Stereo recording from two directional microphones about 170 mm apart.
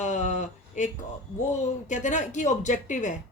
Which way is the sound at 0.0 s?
45° left (ahead or behind).